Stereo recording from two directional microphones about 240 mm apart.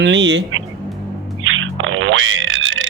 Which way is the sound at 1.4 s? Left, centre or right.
Right.